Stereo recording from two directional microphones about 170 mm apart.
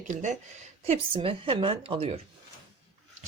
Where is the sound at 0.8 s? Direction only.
35° right (ahead or behind).